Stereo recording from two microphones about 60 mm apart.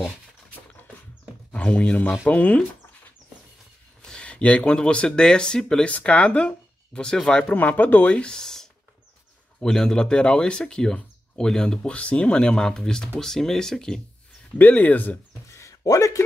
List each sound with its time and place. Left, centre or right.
1.5 s speech: left
4.0 s speech: centre
7.4 s speech: left; by 14.0 s centre
14.6 s speech: left
15.4 s a sound: left
15.8 s speech: left